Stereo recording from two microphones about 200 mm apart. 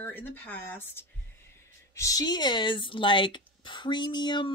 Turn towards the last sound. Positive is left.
turn(degrees=20)  # may be behind; listen again after turning